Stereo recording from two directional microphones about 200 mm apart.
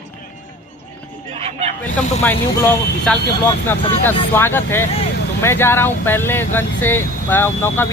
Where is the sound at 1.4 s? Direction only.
30° right (ahead or behind).